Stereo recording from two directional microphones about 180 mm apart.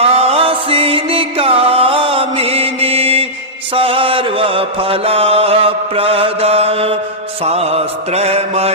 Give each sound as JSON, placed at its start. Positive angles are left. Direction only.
{"t": 0.0, "sound": "music", "side_deg": -35}
{"t": 3.8, "sound": "mantra", "side_deg": -30}